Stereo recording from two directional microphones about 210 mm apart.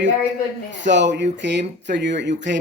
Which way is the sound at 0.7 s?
60° right (ahead or behind).